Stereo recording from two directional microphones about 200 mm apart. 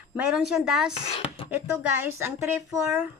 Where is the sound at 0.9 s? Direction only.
30° left (ahead or behind).